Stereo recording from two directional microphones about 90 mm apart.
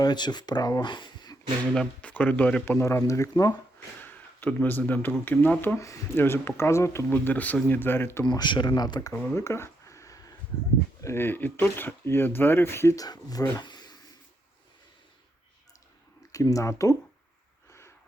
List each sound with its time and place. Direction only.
0.0 s speech: 55° left (ahead or behind)
1.7 s speech: 10° left (ahead or behind)
2.6 s speech: 30° left (ahead or behind)
4.0 s speech: 20° left (ahead or behind)
7.1 s speech: 20° left (ahead or behind)
8.2 s speech: 55° left (ahead or behind)
9.1 s a sound: 25° left (ahead or behind)
11.0 s speech: 25° left (ahead or behind)
13.0 s speech: 45° left (ahead or behind)
13.6 s a sound: 50° left (ahead or behind)
16.3 s speech: 40° left (ahead or behind)
17.7 s a sound: 30° left (ahead or behind)